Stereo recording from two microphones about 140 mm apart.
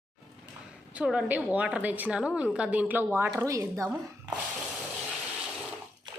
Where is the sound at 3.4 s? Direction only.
20° right (ahead or behind).